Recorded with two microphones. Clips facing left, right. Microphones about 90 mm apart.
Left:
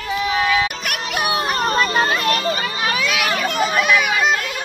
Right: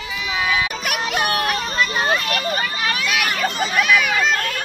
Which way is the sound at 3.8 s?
20° left (ahead or behind).